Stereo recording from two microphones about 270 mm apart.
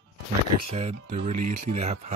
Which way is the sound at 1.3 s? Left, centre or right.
Right.